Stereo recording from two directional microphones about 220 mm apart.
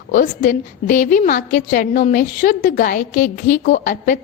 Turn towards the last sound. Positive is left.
turn(degrees=40)  # may be behind; listen again after turning